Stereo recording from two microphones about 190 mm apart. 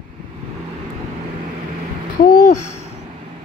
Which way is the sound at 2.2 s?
40° left (ahead or behind).